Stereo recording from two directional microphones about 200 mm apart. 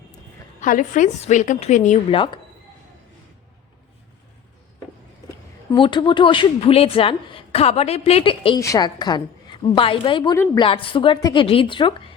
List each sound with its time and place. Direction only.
0.6 s a woman's voice: 40° left (ahead or behind); by 2.4 s 25° left (ahead or behind)
5.7 s speech: 25° left (ahead or behind)
10.3 s a woman's voice: 15° left (ahead or behind)
10.6 s speech: 25° left (ahead or behind)